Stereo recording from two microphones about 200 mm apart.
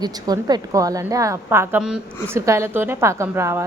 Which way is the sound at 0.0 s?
20° right (ahead or behind).